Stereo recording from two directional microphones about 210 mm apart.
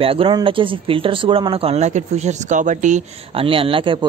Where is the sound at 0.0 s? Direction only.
25° right (ahead or behind).